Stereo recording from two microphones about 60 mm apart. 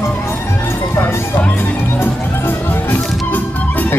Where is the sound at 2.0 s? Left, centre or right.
Left.